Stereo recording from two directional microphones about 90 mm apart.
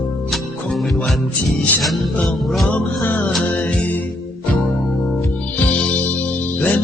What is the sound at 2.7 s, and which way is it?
Music, 20° left (ahead or behind).